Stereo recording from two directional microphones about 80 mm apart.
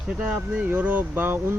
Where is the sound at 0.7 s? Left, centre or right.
Right.